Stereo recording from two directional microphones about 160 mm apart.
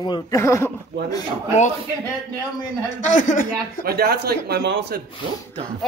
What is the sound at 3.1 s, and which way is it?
Speech, 55° left (ahead or behind).